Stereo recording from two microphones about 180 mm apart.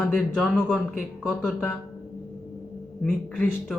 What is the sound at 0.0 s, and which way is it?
Speech, 5° left (ahead or behind).